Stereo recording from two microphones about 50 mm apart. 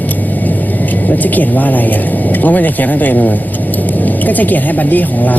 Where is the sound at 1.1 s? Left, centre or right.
Left.